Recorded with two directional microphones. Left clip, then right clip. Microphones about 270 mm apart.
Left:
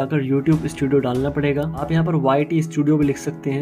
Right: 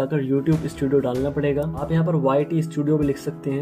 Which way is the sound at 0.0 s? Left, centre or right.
Centre.